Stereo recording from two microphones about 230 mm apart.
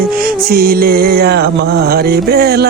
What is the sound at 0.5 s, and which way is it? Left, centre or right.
Music, right.